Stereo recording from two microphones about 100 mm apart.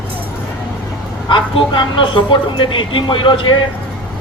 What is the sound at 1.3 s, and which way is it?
Speech, 55° left (ahead or behind).